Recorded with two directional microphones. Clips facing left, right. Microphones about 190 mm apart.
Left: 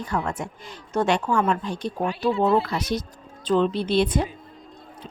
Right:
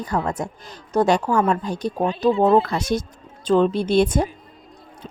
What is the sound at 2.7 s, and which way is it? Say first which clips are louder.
A woman's voice: right 4 dB; 45° right (ahead or behind).